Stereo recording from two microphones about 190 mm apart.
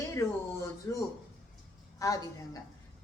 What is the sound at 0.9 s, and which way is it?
A woman's voice, 15° left (ahead or behind).